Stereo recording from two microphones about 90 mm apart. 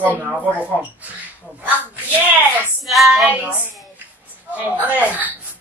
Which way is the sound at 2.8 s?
Centre (ahead or behind).